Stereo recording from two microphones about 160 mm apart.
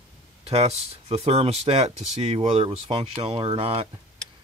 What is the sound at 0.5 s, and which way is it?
Speech, 40° right (ahead or behind).